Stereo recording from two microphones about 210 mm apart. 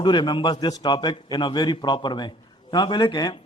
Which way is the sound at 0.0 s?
20° left (ahead or behind).